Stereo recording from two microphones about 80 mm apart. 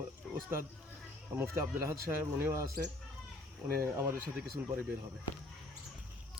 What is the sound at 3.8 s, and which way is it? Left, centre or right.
Speech, right.